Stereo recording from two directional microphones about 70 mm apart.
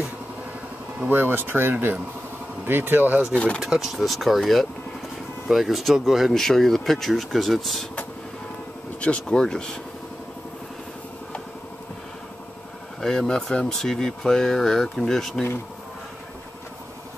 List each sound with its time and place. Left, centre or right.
1.0 s speech: right
3.6 s speech: centre
9.0 s speech: centre
13.0 s speech: centre